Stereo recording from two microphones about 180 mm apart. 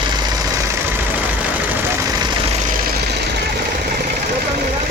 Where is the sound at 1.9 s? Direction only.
20° right (ahead or behind).